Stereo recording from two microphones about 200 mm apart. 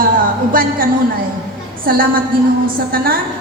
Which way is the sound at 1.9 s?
50° right (ahead or behind).